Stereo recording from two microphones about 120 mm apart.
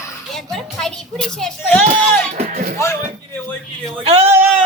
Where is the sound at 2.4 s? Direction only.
90° right.